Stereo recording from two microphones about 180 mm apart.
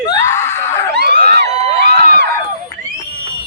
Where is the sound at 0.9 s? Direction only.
65° right (ahead or behind).